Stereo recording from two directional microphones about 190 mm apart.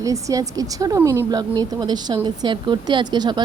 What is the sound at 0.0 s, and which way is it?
Speech, 15° right (ahead or behind).